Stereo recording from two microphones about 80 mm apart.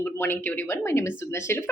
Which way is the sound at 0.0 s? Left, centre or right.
Left.